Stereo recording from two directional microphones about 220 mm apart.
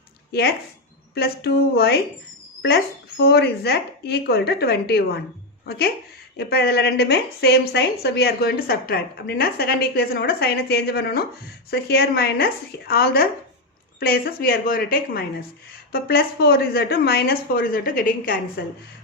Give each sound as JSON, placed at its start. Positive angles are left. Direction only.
{"t": 0.3, "sound": "a woman's voice", "side_deg": 45}